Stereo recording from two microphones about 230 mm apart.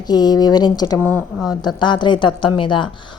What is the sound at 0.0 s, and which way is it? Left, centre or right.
A woman's voice, centre.